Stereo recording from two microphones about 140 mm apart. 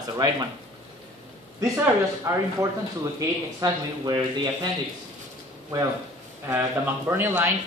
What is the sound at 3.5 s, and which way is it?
Speech, 25° right (ahead or behind).